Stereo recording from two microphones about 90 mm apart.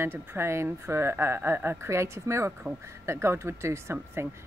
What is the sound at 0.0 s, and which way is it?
Speech, 25° right (ahead or behind).